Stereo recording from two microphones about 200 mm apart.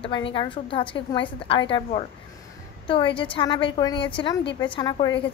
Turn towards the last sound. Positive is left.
turn(degrees=20)  # may be behind; listen again after turning